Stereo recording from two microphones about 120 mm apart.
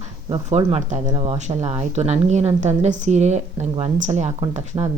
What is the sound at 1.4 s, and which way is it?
A woman's voice, 70° right (ahead or behind).